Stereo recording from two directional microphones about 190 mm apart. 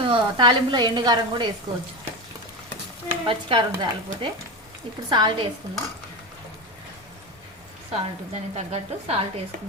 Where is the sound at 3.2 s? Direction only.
25° right (ahead or behind).